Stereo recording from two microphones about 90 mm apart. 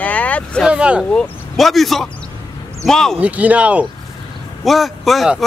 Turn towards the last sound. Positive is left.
turn(degrees=0)  # may be behind; listen again after turning